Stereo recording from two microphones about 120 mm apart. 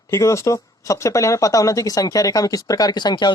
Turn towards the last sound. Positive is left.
turn(degrees=40)  # may be behind; listen again after turning